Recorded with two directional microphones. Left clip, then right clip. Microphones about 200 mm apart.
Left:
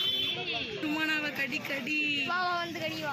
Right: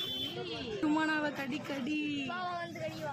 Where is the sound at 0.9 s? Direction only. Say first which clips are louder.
Left 3 dB; 45° right (ahead or behind).